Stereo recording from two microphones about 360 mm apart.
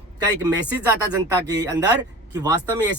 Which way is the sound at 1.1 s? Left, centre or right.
Centre.